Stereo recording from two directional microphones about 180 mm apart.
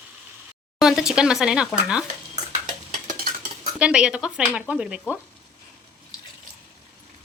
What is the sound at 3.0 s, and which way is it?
Stir, 50° right (ahead or behind).